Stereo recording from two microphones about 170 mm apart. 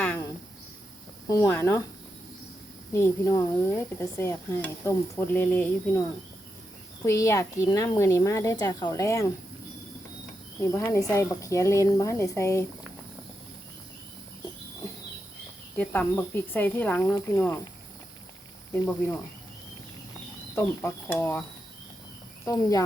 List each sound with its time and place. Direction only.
1.3 s speech: 15° left (ahead or behind)
2.9 s speech: 15° left (ahead or behind)
7.0 s speech: 15° left (ahead or behind)
10.6 s speech: 15° left (ahead or behind)
15.8 s speech: 10° left (ahead or behind)
20.6 s speech: 10° left (ahead or behind)
22.4 s speech: 20° left (ahead or behind)